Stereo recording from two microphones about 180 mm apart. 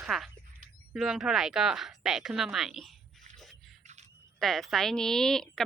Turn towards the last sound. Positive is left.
turn(degrees=5)  # may be behind; listen again after turning